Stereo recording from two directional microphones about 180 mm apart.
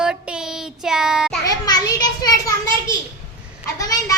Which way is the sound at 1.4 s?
20° left (ahead or behind).